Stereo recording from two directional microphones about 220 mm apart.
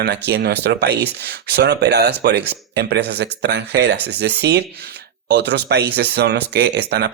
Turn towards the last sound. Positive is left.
turn(degrees=-50)  # may be behind; listen again after turning